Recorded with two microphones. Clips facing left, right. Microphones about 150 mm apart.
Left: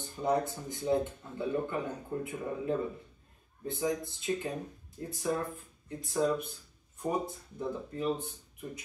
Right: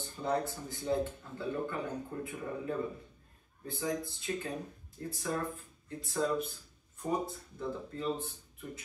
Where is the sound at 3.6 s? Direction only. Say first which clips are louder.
Left 3 dB; 20° left (ahead or behind).